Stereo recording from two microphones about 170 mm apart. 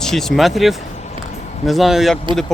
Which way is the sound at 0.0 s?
Centre (ahead or behind).